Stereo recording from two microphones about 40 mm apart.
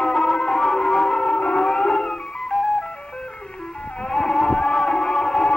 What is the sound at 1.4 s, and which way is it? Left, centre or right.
Siren, left.